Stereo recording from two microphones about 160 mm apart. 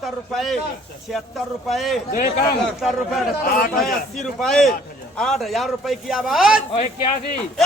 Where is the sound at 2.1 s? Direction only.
55° left (ahead or behind).